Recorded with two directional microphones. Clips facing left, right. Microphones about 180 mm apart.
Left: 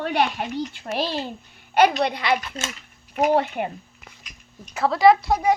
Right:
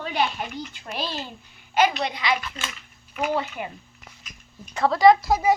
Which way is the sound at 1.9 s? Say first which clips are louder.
Left 4 dB; 55° left (ahead or behind).